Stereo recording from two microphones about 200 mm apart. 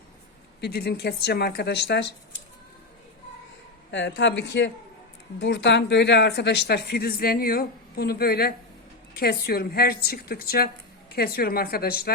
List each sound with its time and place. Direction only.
0.6 s speech: 55° left (ahead or behind)
3.9 s a man's voice: 60° left (ahead or behind)